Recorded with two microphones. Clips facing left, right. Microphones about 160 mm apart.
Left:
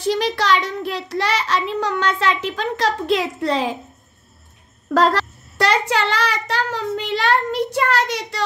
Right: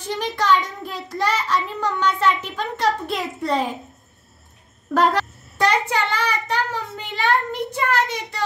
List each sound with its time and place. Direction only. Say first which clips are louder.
0.0 s a child's voice: left 4 dB; 90° left
4.9 s a child's voice: left 2 dB; 90° left